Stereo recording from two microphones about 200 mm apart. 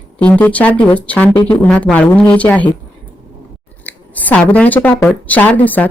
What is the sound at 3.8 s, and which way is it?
Speech, 10° left (ahead or behind).